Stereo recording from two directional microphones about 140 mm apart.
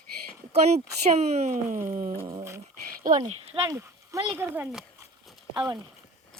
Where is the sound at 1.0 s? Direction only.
50° right (ahead or behind).